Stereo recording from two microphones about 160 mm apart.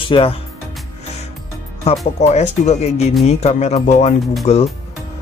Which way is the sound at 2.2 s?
45° left (ahead or behind).